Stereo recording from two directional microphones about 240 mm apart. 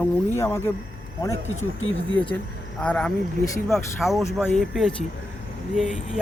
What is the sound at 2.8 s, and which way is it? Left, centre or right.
Speech, centre.